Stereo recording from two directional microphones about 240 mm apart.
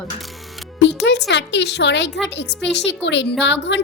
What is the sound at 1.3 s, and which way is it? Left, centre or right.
A woman's voice, left.